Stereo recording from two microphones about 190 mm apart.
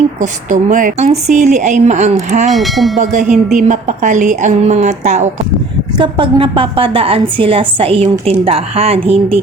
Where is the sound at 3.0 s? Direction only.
40° right (ahead or behind).